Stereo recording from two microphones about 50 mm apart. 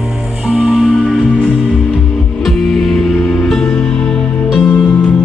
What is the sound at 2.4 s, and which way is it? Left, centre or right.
Music, centre.